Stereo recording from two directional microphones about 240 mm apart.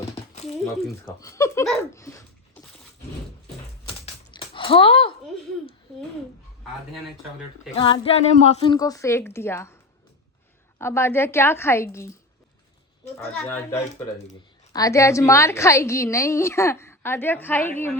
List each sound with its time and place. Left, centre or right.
0.6 s speech: centre
1.0 s a woman's voice: centre
3.8 s typing: left
7.8 s a woman's voice: left
10.8 s a woman's voice: centre
13.1 s speech: centre
14.7 s a woman's voice: centre